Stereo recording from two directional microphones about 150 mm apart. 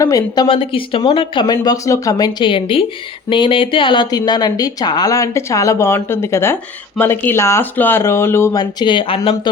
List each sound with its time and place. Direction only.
0.0 s speech: 20° left (ahead or behind)
0.4 s speech: 35° left (ahead or behind); by 8.6 s 15° left (ahead or behind)
8.8 s speech: 30° left (ahead or behind)